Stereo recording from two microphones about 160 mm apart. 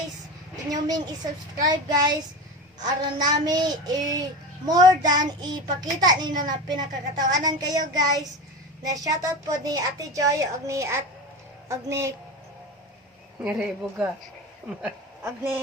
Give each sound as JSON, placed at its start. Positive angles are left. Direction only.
{"t": 0.5, "sound": "a woman's voice", "side_deg": -25}
{"t": 13.4, "sound": "speech", "side_deg": -5}
{"t": 14.8, "sound": "a sound", "side_deg": -10}